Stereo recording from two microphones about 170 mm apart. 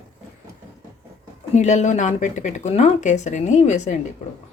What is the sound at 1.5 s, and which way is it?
Speech, 45° left (ahead or behind).